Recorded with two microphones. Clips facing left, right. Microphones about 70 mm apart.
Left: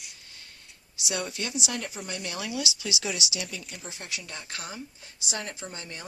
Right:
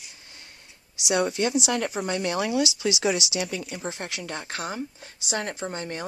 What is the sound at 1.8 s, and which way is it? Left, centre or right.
Speech, right.